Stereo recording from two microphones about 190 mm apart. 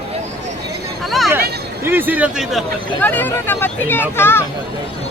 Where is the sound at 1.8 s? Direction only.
10° right (ahead or behind).